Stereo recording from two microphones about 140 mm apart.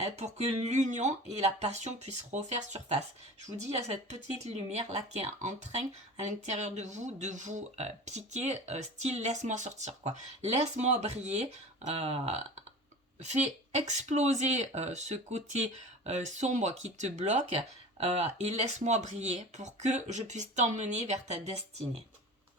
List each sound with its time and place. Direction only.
0.0 s speech: 50° right (ahead or behind)